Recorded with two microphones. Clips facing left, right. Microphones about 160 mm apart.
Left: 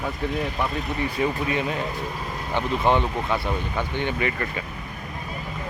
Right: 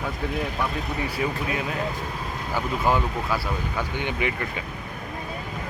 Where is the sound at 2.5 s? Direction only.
25° left (ahead or behind).